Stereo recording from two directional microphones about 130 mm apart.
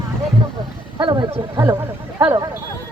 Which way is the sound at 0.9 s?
35° right (ahead or behind).